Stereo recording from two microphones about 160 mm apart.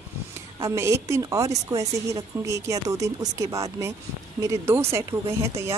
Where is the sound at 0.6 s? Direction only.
20° right (ahead or behind).